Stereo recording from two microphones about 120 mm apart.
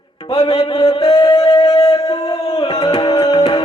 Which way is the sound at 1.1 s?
35° left (ahead or behind).